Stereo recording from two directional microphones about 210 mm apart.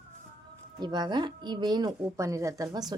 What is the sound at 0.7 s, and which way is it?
Speech, 20° right (ahead or behind).